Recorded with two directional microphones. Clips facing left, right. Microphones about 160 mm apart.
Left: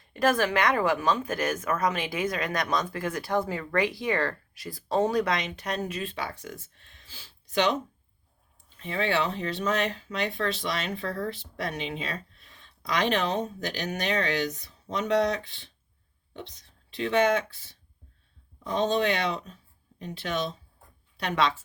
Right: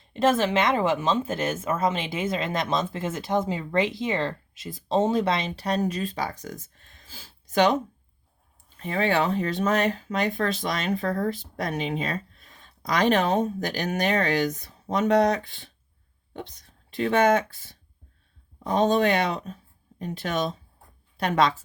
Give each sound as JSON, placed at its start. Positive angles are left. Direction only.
{"t": 0.0, "sound": "speech", "side_deg": -25}
{"t": 8.8, "sound": "speech", "side_deg": -45}